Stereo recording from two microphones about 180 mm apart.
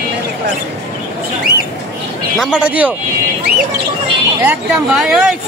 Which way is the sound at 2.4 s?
5° right (ahead or behind).